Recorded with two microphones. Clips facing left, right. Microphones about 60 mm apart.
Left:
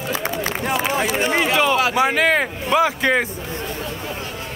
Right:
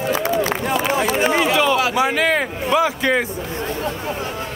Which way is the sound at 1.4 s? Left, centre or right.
Left.